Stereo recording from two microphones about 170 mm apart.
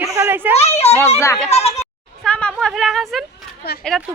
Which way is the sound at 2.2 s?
5° left (ahead or behind).